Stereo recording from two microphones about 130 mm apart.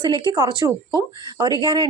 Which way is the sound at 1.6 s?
35° right (ahead or behind).